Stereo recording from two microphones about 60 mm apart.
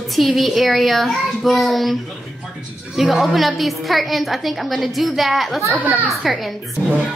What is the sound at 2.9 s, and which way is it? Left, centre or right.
A woman's voice, centre.